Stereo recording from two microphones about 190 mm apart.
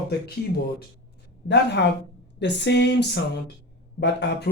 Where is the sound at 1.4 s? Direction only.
65° left (ahead or behind).